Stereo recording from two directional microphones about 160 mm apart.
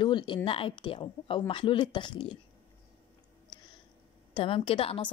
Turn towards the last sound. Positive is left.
turn(degrees=35)  # may be behind; listen again after turning